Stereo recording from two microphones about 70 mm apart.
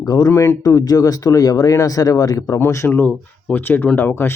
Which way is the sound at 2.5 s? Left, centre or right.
Left.